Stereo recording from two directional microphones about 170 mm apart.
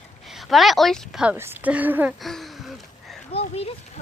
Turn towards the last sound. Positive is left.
turn(degrees=35)  # may be behind; listen again after turning